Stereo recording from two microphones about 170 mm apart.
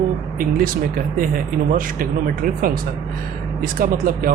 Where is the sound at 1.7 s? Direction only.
55° right (ahead or behind).